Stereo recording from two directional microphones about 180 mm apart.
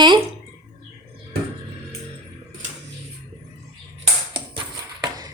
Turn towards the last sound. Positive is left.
turn(degrees=-20)  # may be behind; listen again after turning